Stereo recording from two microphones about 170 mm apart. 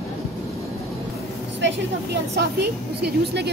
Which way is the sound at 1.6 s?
80° right.